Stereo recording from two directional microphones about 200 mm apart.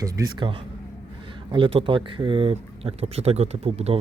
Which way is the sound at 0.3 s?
25° right (ahead or behind).